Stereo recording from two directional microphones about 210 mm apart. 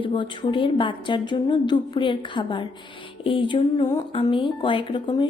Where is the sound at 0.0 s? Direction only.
25° left (ahead or behind).